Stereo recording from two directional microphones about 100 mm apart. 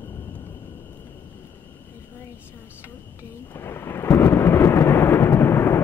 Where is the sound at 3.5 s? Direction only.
25° left (ahead or behind).